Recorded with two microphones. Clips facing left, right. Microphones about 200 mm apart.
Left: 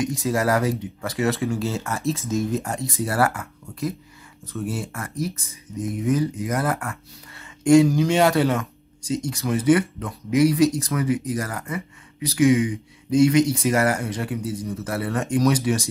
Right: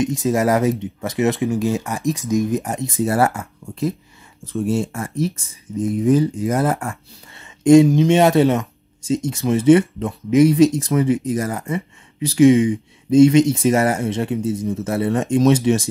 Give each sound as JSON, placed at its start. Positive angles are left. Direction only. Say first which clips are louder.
{"t": 0.2, "sound": "speech", "louder": "right 4 dB", "side_deg": -20}